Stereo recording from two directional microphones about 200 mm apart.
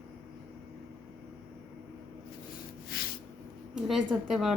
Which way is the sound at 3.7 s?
Centre (ahead or behind).